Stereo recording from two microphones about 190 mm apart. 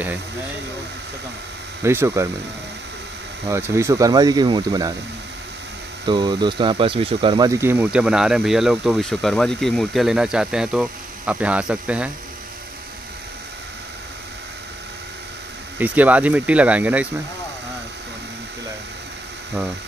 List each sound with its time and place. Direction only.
1.8 s speech: 15° right (ahead or behind)
3.4 s speech: 15° right (ahead or behind)
6.0 s speech: 25° right (ahead or behind); by 12.1 s 5° right (ahead or behind)
15.8 s speech: 10° right (ahead or behind)